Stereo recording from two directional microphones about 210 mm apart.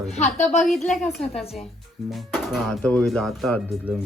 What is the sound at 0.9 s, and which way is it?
Speech, centre (ahead or behind).